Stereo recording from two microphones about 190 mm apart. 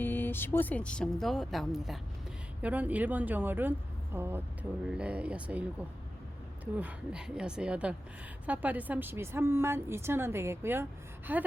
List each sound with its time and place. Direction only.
0.0 s a woman's voice: 10° left (ahead or behind); by 5.6 s 5° right (ahead or behind)
6.7 s a woman's voice: 5° right (ahead or behind)